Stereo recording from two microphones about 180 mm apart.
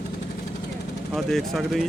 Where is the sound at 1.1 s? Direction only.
Centre (ahead or behind).